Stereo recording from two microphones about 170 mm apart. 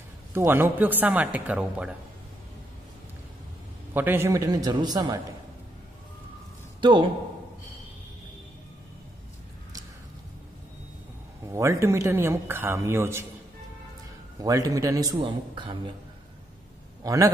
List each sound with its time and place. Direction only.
0.3 s speech: 15° right (ahead or behind)
3.9 s a man's voice: 10° right (ahead or behind)
6.8 s a man's voice: 30° right (ahead or behind)
11.5 s speech: 15° right (ahead or behind)
14.4 s a man's voice: 20° right (ahead or behind)
17.0 s a man's voice: 20° right (ahead or behind)